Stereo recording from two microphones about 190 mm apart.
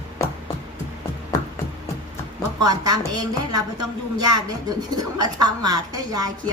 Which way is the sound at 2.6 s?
20° right (ahead or behind).